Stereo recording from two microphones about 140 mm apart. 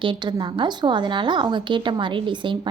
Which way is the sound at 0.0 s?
35° right (ahead or behind).